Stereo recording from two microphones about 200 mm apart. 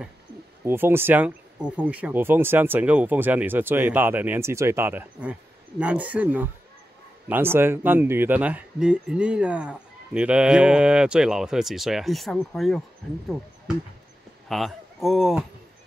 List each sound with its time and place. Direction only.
0.7 s speech: 10° right (ahead or behind)
14.5 s speech: centre (ahead or behind)